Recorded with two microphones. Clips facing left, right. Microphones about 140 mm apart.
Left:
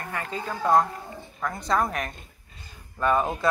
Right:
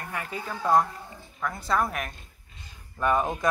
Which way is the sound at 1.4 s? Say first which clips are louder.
Left 1 dB; centre (ahead or behind).